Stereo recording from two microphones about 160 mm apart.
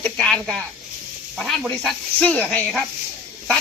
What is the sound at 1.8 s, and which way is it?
Speech, 5° left (ahead or behind).